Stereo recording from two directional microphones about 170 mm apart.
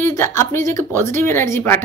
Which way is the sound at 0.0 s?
15° left (ahead or behind).